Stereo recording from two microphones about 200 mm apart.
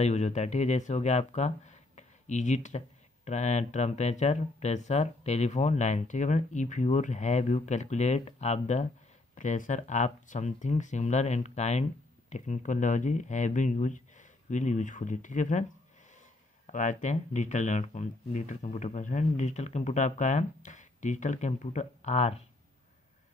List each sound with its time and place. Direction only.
0.0 s speech: 35° left (ahead or behind)
16.6 s speech: 35° left (ahead or behind)